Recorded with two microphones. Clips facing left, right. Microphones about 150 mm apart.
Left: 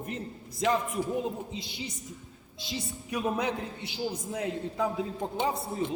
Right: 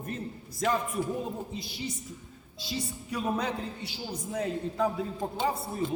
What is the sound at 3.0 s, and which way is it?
A man's voice, 15° left (ahead or behind).